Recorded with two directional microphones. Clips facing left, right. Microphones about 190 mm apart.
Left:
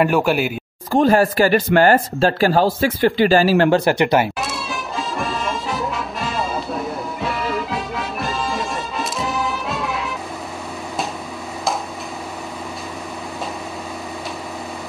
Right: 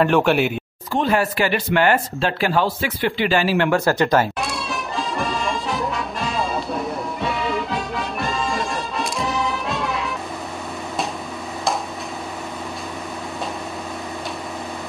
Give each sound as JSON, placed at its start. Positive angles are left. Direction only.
{"t": 0.0, "sound": "speech", "side_deg": 5}
{"t": 0.9, "sound": "speech", "side_deg": 40}
{"t": 3.8, "sound": "speech", "side_deg": 15}
{"t": 4.4, "sound": "music", "side_deg": 0}